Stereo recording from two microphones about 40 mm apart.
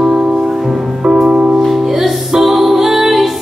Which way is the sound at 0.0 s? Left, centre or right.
Centre.